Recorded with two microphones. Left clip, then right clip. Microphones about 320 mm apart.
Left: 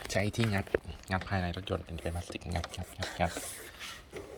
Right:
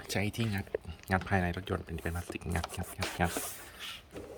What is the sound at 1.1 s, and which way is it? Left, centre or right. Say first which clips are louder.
Speech: right 3 dB; centre.